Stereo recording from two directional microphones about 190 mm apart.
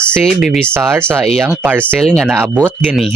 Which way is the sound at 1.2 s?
Centre (ahead or behind).